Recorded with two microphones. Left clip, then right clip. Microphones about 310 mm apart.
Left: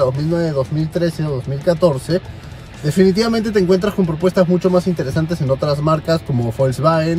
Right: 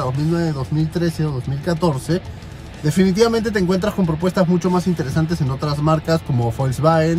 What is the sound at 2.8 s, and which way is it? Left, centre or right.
Speech, centre.